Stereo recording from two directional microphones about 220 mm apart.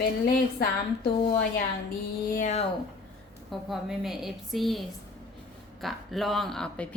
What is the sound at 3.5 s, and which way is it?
Speech, centre (ahead or behind).